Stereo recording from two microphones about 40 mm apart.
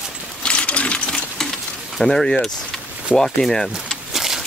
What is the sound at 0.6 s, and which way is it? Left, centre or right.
Sewing machine, left.